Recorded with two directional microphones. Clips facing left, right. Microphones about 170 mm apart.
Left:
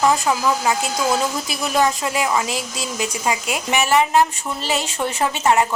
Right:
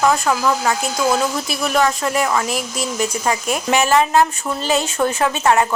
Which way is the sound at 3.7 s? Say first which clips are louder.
Right 1 dB; 15° left (ahead or behind).